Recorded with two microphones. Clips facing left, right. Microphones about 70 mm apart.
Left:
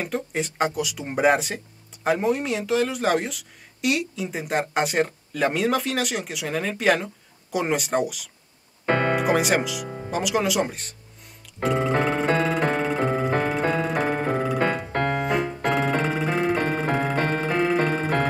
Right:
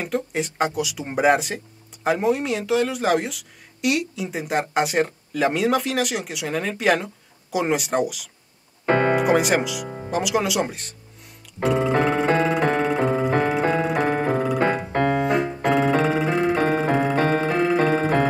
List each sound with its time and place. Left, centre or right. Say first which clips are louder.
0.0 s speech: right 2 dB; centre
8.8 s music: right 3 dB; centre
9.1 s speech: right 2 dB; centre
11.6 s music: right 2 dB; centre
15.1 s keyboard: right 3 dB; centre
15.6 s music: right 6 dB; centre